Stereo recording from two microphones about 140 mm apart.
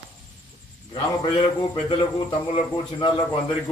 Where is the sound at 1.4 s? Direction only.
35° left (ahead or behind).